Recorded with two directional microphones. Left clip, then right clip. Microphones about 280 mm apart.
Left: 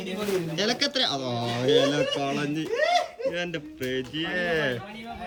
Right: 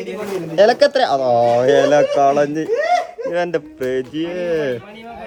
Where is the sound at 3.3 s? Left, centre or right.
Right.